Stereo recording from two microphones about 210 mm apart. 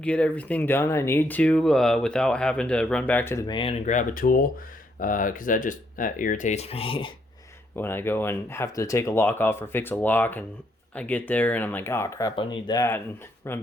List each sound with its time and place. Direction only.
0.0 s speech: 5° left (ahead or behind); by 7.1 s 25° left (ahead or behind)
7.8 s speech: 10° left (ahead or behind)